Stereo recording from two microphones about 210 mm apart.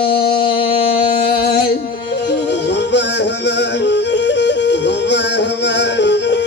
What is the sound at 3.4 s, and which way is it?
Yodeling, 55° left (ahead or behind).